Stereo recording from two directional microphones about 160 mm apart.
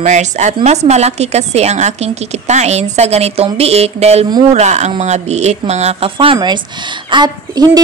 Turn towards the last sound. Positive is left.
turn(degrees=-25)  # may be behind; listen again after turning